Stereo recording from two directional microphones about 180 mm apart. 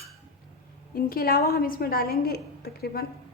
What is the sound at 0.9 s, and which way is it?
A woman's voice, 55° left (ahead or behind).